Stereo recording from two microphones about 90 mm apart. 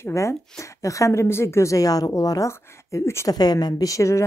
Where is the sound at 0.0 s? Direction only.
35° left (ahead or behind).